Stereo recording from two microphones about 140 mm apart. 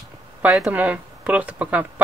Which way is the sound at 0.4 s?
5° right (ahead or behind).